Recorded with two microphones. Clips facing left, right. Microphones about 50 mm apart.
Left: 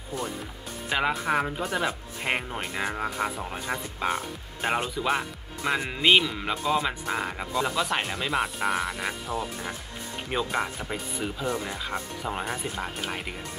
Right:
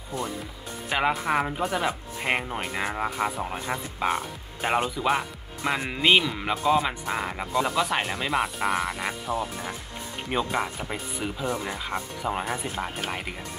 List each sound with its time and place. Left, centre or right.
0.8 s speech: centre